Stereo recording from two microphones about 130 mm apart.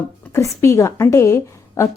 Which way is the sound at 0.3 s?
20° left (ahead or behind).